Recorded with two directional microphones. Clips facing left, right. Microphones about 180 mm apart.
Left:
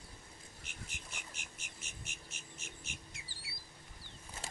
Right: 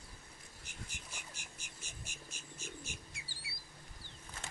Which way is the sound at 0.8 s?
20° left (ahead or behind).